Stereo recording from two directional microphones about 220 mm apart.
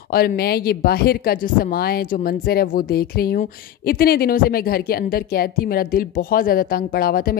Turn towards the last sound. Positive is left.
turn(degrees=45)  # may be behind; listen again after turning